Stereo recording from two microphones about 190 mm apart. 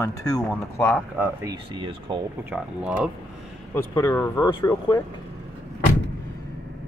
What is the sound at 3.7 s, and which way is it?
Speech, 15° left (ahead or behind).